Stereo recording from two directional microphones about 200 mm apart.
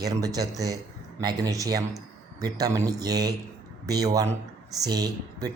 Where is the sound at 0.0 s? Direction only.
15° right (ahead or behind).